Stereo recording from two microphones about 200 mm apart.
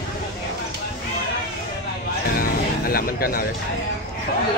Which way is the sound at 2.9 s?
45° left (ahead or behind).